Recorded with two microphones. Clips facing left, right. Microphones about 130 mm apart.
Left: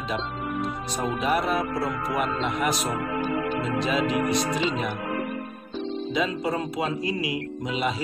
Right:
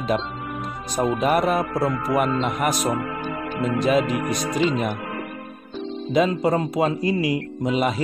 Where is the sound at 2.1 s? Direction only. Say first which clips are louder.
Right 4 dB; 50° right (ahead or behind).